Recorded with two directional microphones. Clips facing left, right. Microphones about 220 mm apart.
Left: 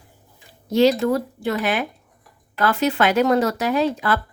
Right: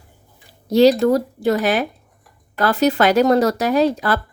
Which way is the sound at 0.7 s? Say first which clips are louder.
Right 4 dB; 35° right (ahead or behind).